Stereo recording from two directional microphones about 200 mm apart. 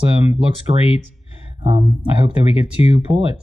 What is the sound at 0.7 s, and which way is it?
Speech, 25° right (ahead or behind).